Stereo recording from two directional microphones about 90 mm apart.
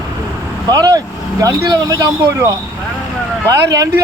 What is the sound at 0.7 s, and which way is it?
Speech, 45° right (ahead or behind).